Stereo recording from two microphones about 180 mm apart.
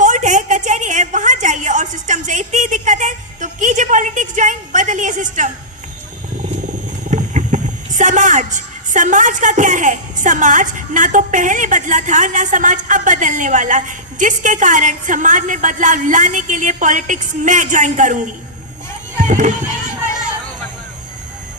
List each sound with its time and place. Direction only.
0.0 s a sound: 45° right (ahead or behind)
7.1 s speech: 45° right (ahead or behind)
19.1 s music: 45° right (ahead or behind)